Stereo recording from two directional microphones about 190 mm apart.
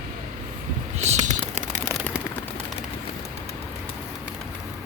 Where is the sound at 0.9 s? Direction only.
35° right (ahead or behind).